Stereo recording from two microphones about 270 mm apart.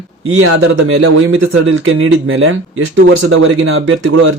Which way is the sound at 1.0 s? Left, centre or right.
Right.